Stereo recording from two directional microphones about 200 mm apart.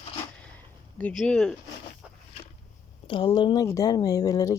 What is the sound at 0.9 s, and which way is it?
Speech, 5° left (ahead or behind).